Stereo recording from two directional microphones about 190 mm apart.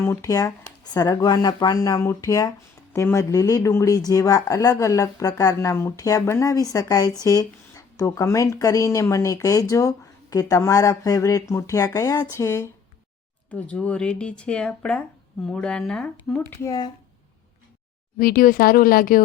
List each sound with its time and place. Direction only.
0.0 s speech: 15° left (ahead or behind)
16.6 s speech: 20° left (ahead or behind)
18.2 s speech: 50° left (ahead or behind)